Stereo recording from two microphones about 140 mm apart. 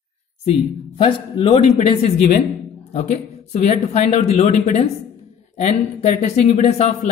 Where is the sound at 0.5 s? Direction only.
40° left (ahead or behind).